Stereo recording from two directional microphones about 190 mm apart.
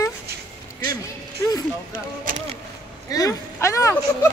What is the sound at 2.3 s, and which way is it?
Speech, 45° right (ahead or behind).